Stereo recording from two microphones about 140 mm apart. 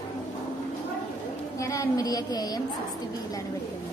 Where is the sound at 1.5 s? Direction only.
25° left (ahead or behind).